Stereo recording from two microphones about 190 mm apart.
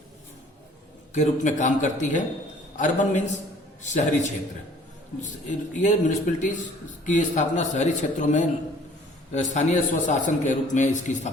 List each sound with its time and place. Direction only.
1.1 s a man's voice: 40° left (ahead or behind)
5.5 s a man's voice: 40° left (ahead or behind)